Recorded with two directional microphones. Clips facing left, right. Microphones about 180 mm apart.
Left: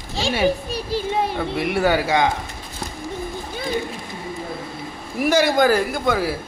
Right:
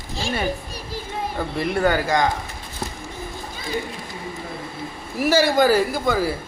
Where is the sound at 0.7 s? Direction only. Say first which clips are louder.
Left 8 dB; 75° left (ahead or behind).